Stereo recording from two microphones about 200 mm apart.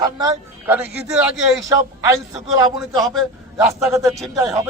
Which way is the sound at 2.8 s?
Centre (ahead or behind).